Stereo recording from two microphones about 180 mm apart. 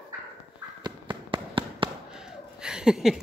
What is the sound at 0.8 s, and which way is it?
Fireworks, 25° right (ahead or behind).